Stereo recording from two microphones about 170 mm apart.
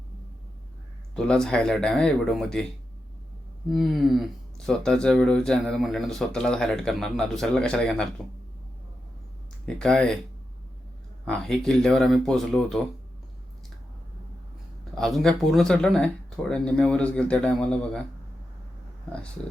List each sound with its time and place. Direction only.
1.1 s speech: 5° left (ahead or behind)
3.7 s speech: centre (ahead or behind)
9.6 s speech: 5° left (ahead or behind)
11.3 s speech: 5° left (ahead or behind)
14.9 s speech: centre (ahead or behind)